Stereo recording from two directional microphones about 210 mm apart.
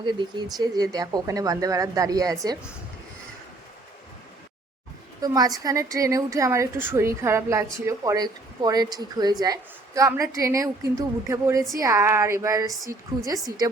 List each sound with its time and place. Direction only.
0.0 s a woman's voice: 20° right (ahead or behind)
5.2 s a woman's voice: 15° right (ahead or behind)